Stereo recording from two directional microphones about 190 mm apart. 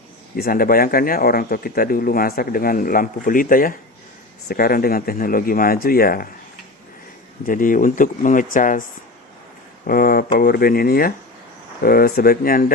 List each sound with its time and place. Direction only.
0.3 s speech: 50° left (ahead or behind)
7.4 s speech: 45° left (ahead or behind)
9.8 s speech: 50° left (ahead or behind)